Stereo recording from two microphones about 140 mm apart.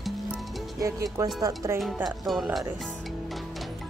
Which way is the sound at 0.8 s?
25° right (ahead or behind).